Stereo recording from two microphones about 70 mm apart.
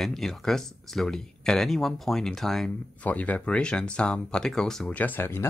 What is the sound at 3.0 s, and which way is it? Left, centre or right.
Speech, left.